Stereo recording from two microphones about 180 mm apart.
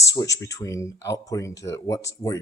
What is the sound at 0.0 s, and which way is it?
Speech, 20° left (ahead or behind).